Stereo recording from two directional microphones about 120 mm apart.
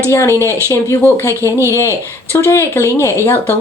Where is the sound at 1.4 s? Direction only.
25° right (ahead or behind).